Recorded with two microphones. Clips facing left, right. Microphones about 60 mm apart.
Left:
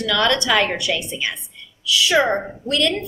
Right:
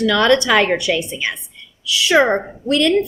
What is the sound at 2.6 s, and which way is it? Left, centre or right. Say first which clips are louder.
Speech: right 4 dB; right.